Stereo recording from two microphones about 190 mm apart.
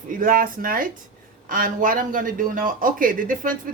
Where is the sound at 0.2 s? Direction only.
50° right (ahead or behind).